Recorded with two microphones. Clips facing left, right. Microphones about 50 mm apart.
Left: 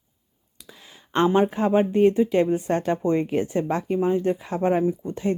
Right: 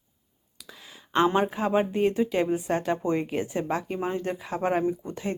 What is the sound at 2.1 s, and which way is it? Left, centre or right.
Speech, centre.